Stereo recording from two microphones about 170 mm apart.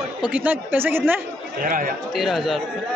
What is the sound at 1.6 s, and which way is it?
Speech, 55° right (ahead or behind).